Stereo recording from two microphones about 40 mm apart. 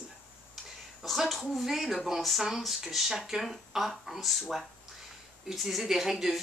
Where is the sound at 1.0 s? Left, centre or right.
Centre.